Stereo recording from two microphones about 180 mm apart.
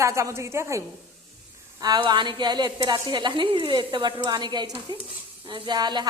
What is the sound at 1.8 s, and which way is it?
Speech, 25° right (ahead or behind).